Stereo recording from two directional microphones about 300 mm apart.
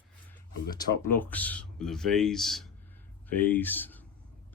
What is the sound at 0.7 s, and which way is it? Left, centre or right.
Speech, centre.